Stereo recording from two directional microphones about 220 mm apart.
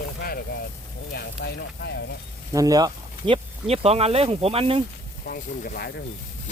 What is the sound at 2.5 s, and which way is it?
Speech, 15° right (ahead or behind).